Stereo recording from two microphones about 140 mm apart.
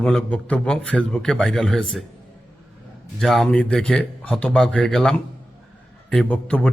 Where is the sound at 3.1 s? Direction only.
5° left (ahead or behind).